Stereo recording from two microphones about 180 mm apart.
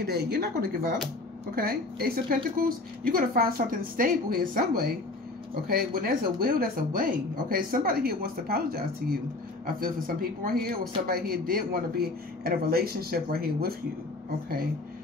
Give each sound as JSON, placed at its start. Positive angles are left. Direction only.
{"t": 0.0, "sound": "speech", "side_deg": -60}